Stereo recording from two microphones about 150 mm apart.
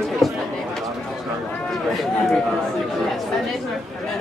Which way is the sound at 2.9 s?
Centre (ahead or behind).